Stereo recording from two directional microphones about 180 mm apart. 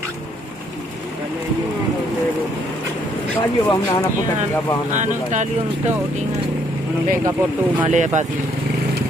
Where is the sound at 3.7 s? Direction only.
20° left (ahead or behind).